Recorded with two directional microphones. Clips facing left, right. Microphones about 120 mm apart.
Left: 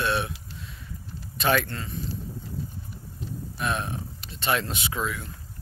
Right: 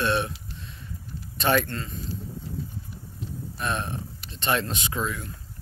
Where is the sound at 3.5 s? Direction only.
5° left (ahead or behind).